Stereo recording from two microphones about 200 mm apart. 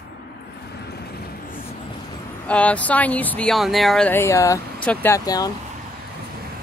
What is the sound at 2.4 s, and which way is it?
Speech, 5° left (ahead or behind).